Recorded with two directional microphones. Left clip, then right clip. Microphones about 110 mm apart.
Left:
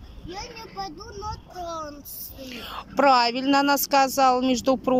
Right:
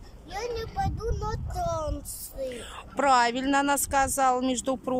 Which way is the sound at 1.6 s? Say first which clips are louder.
Right 3 dB; 30° right (ahead or behind).